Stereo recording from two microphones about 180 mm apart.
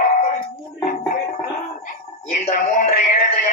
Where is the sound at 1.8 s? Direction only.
40° left (ahead or behind).